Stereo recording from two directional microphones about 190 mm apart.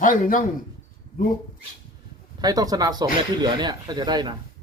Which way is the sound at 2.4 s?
20° right (ahead or behind).